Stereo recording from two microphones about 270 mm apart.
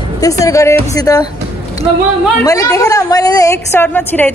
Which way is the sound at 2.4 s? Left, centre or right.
Centre.